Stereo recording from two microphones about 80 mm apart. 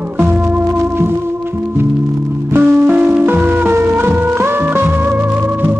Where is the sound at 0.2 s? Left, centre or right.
Right.